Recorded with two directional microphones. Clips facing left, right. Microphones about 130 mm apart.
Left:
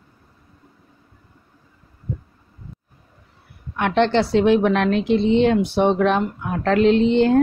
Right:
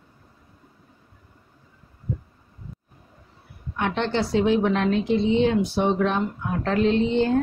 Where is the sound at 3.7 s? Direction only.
75° left (ahead or behind).